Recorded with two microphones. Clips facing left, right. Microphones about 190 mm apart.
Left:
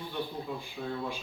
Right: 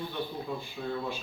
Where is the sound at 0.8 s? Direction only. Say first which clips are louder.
Right 1 dB; 5° left (ahead or behind).